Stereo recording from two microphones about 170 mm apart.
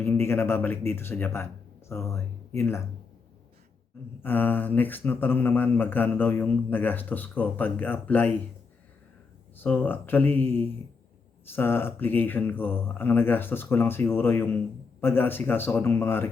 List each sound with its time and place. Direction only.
0.0 s speech: 15° left (ahead or behind)
4.2 s speech: 10° left (ahead or behind)
9.6 s speech: 10° left (ahead or behind)